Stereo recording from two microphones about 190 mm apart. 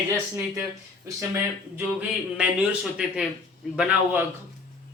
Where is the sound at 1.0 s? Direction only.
15° right (ahead or behind).